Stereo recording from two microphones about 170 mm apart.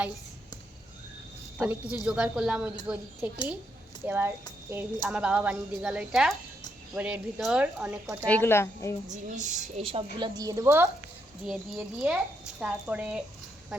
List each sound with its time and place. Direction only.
1.5 s a woman's voice: 10° right (ahead or behind)
8.3 s a woman's voice: 15° left (ahead or behind)
9.0 s a woman's voice: 45° right (ahead or behind)
10.3 s a woman's voice: 20° right (ahead or behind)
11.4 s a woman's voice: 5° right (ahead or behind)